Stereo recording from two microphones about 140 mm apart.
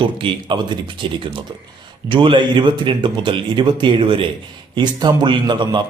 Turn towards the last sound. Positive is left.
turn(degrees=-35)  # may be behind; listen again after turning